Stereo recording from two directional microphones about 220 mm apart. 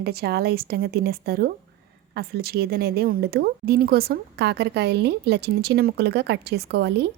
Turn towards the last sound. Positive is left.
turn(degrees=-50)  # may be behind; listen again after turning